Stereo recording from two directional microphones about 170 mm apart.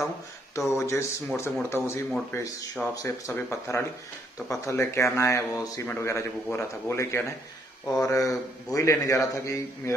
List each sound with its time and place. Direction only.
0.7 s speech: 15° left (ahead or behind)
2.9 s speech: 20° left (ahead or behind)